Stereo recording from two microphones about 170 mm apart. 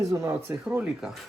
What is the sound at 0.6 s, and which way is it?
Speech, 5° right (ahead or behind).